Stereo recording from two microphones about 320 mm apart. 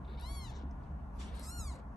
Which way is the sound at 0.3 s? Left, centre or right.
Centre.